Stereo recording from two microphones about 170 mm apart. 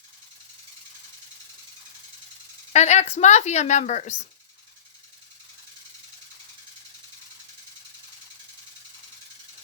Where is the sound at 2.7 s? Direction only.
40° left (ahead or behind).